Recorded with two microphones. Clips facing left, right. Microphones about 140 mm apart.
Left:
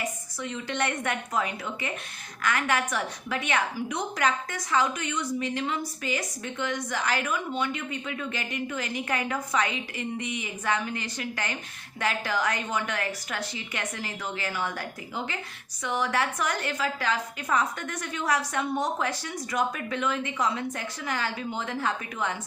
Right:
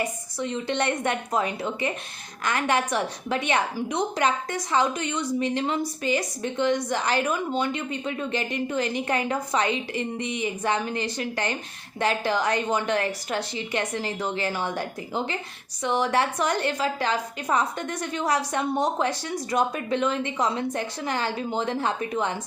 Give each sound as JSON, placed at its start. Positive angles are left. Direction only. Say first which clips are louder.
{"t": 0.3, "sound": "a woman's voice", "louder": "right 5 dB", "side_deg": -30}